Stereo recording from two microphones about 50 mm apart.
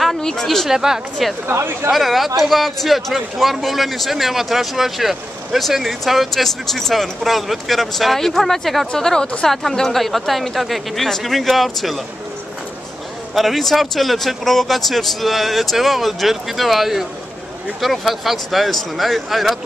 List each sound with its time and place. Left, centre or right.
0.2 s speech: centre
0.7 s speech: centre
1.5 s speech: right
1.9 s speech: centre
13.3 s speech: centre